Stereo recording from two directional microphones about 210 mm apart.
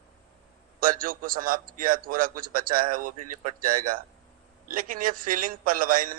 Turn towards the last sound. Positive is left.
turn(degrees=-40)  # may be behind; listen again after turning